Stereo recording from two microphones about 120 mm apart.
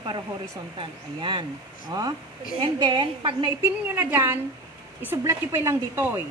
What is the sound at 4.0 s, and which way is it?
A woman's voice, 15° right (ahead or behind).